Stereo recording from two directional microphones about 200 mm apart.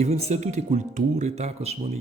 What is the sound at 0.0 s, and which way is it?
Speech, 30° right (ahead or behind).